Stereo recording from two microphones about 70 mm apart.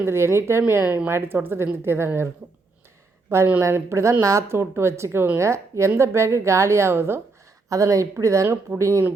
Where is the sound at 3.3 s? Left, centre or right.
Right.